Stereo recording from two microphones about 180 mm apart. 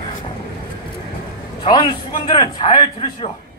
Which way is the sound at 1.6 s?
25° left (ahead or behind).